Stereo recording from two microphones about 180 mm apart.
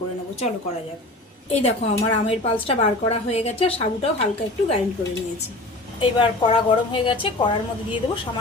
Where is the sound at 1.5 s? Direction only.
35° left (ahead or behind).